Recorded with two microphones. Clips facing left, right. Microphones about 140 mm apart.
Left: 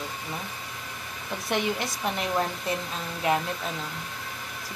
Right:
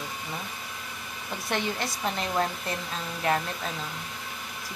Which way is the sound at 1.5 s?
15° left (ahead or behind).